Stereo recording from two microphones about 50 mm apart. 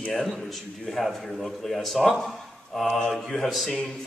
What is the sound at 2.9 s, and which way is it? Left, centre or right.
Speech, centre.